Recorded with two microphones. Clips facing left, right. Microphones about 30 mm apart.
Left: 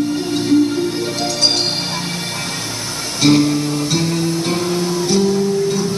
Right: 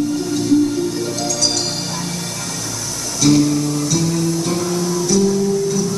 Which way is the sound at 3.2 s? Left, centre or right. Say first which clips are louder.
Left 1 dB; left.